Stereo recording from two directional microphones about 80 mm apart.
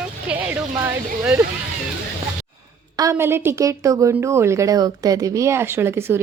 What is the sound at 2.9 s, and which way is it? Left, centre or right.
Speech, right.